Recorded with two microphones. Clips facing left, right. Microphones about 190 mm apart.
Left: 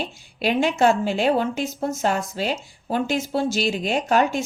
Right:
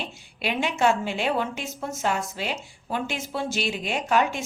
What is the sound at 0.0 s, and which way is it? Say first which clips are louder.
A woman's voice: left 6 dB; 40° left (ahead or behind).